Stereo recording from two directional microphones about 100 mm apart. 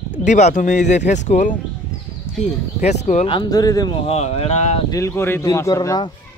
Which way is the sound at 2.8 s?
90° left.